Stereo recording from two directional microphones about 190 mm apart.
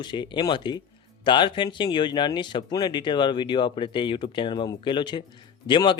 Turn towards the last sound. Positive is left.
turn(degrees=25)  # may be behind; listen again after turning